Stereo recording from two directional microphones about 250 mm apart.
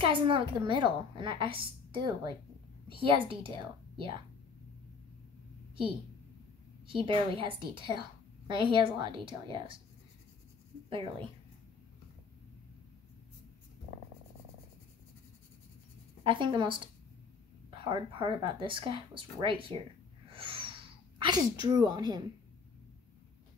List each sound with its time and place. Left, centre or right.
0.0 s a woman's voice: centre
6.9 s a woman's voice: right
10.9 s a woman's voice: right
16.3 s a woman's voice: centre
20.2 s sneeze: right